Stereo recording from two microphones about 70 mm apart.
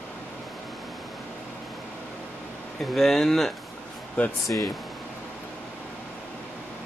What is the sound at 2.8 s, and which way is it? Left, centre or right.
Speech, centre.